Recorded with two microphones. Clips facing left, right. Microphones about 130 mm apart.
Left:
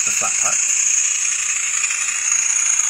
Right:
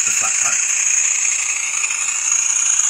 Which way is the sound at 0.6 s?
60° right (ahead or behind).